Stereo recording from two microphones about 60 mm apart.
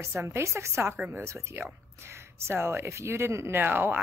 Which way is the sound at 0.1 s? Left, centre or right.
Right.